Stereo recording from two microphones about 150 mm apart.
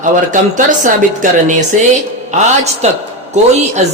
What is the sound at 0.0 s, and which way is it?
Speech, 55° right (ahead or behind).